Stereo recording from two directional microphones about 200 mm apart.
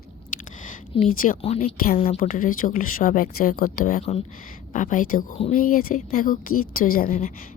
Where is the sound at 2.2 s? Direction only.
45° left (ahead or behind).